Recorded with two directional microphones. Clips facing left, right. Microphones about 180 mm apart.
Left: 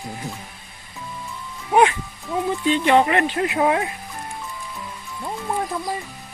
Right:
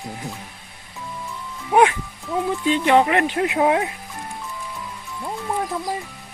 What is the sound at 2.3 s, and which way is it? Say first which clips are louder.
Speech: even; centre (ahead or behind).